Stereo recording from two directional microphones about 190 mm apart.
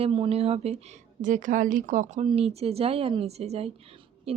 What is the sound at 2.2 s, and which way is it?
A woman's voice, 30° right (ahead or behind).